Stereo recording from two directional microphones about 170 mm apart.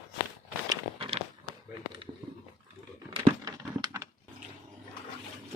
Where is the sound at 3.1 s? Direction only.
30° right (ahead or behind).